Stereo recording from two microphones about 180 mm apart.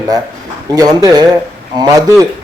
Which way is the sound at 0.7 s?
20° right (ahead or behind).